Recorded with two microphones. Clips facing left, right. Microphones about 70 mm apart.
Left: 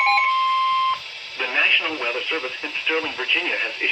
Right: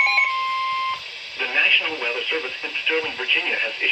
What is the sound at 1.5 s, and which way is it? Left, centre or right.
Radio, centre.